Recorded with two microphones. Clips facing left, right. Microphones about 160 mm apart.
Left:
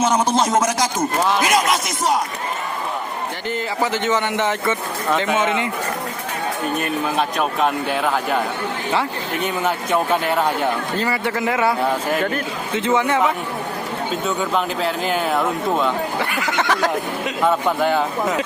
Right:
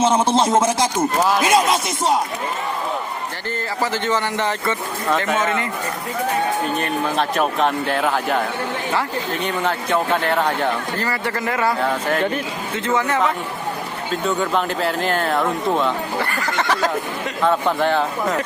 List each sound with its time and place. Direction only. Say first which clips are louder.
0.0 s a sound: right 1 dB; 30° right (ahead or behind)
1.4 s speech: right 2 dB; 30° right (ahead or behind)
4.0 s speech: left 1 dB; 15° left (ahead or behind)
7.2 s speech: right 1 dB; centre (ahead or behind)
9.6 s speech: left 1 dB; 10° left (ahead or behind)
12.8 s speech: left 1 dB; 10° left (ahead or behind)
14.3 s speech: right 2 dB; centre (ahead or behind)